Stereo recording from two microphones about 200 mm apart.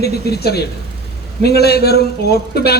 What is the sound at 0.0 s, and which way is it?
A woman's voice, 50° left (ahead or behind).